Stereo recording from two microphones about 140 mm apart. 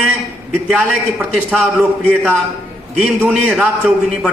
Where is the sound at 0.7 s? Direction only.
Centre (ahead or behind).